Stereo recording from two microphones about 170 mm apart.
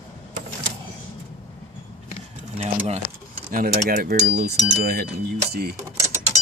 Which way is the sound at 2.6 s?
40° right (ahead or behind).